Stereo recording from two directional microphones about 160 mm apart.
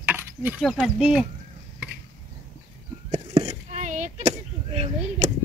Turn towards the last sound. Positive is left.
turn(degrees=-40)  # may be behind; listen again after turning